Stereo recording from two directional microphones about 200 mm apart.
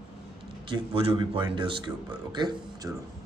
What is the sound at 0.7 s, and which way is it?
A man's voice, 25° right (ahead or behind).